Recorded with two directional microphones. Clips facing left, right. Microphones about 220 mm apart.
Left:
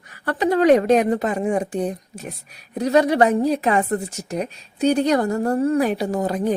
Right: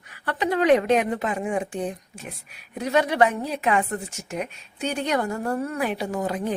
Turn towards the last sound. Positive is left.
turn(degrees=40)  # may be behind; listen again after turning